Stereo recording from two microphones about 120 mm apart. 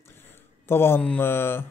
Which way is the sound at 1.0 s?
15° left (ahead or behind).